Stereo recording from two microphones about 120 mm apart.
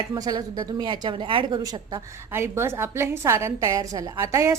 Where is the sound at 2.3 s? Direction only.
20° right (ahead or behind).